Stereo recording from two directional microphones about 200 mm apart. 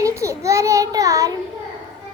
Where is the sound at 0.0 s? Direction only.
15° right (ahead or behind).